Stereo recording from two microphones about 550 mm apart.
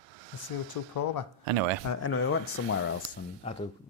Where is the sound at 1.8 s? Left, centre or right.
Left.